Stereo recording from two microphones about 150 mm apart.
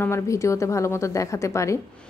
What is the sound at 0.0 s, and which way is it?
A woman's voice, 20° left (ahead or behind).